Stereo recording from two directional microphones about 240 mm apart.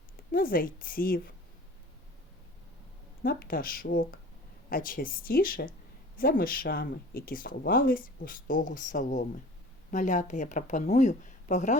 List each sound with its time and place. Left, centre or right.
0.3 s speech: left
3.2 s speech: left